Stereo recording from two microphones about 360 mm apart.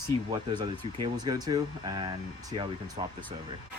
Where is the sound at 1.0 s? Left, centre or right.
Centre.